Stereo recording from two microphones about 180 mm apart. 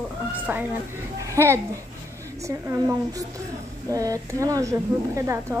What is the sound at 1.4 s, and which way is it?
Speech, 15° right (ahead or behind).